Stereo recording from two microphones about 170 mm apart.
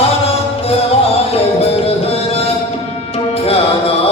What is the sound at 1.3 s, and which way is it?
Music, 35° left (ahead or behind).